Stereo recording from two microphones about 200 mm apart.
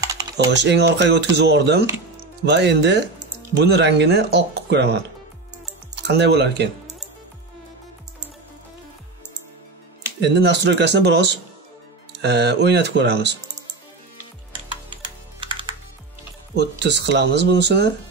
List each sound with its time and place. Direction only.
0.0 s typing: 15° right (ahead or behind)
0.6 s speech: 60° right (ahead or behind)
6.0 s speech: 60° right (ahead or behind)
10.2 s speech: 60° right (ahead or behind)
15.4 s music: 25° right (ahead or behind)
16.5 s speech: 60° right (ahead or behind)